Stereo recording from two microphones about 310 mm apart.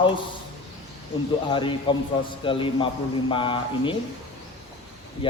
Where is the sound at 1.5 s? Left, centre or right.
Centre.